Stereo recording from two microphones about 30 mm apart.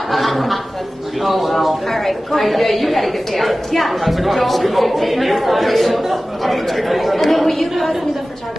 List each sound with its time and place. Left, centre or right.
0.1 s a woman's voice: centre